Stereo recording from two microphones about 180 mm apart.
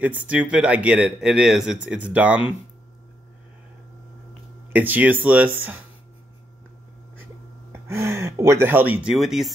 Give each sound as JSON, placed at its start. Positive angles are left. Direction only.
{"t": 0.3, "sound": "speech", "side_deg": -5}
{"t": 4.7, "sound": "speech", "side_deg": -10}
{"t": 7.9, "sound": "speech", "side_deg": -15}